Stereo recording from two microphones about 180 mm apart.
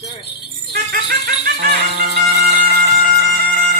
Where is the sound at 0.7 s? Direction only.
60° right (ahead or behind).